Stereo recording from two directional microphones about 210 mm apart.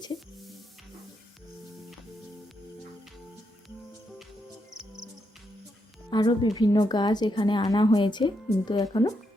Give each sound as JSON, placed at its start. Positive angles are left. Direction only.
{"t": 6.1, "sound": "a woman's voice", "side_deg": 20}